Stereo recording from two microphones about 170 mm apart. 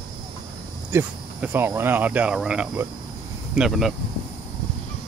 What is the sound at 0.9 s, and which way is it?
Speech, 10° right (ahead or behind).